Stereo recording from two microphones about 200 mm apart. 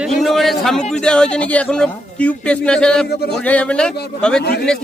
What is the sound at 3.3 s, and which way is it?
A man's voice, 5° left (ahead or behind).